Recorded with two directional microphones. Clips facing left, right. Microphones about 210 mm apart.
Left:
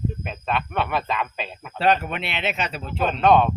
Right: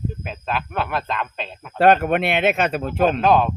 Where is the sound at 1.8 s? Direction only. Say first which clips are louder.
Right 6 dB; 50° right (ahead or behind).